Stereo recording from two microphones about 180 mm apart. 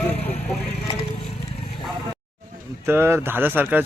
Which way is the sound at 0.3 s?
35° left (ahead or behind).